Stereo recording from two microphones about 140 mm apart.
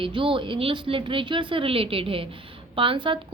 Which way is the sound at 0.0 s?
40° right (ahead or behind).